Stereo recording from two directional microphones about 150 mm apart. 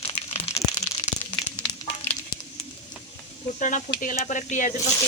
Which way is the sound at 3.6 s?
55° left (ahead or behind).